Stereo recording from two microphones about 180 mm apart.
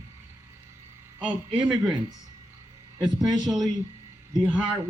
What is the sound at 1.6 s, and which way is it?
Speech, 5° right (ahead or behind).